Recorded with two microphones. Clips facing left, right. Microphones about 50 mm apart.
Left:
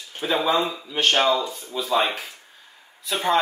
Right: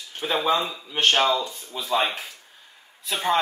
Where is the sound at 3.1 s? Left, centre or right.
Centre.